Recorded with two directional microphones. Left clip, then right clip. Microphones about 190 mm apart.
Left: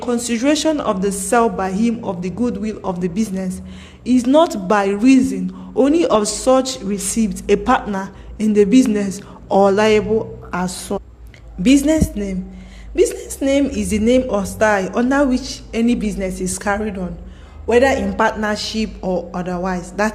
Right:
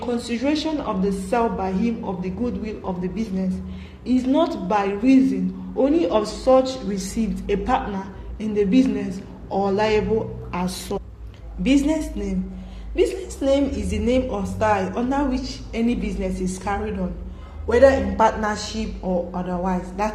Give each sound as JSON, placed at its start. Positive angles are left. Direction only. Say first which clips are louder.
{"t": 0.0, "sound": "a woman's voice", "louder": "left 5 dB", "side_deg": 50}
{"t": 10.2, "sound": "a woman's voice", "louder": "left 5 dB", "side_deg": 30}
{"t": 11.6, "sound": "a woman's voice", "louder": "left 6 dB", "side_deg": 45}